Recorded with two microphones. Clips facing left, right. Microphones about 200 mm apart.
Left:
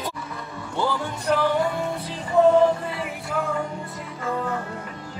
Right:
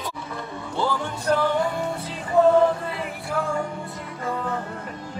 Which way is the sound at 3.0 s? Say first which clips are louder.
Even; centre (ahead or behind).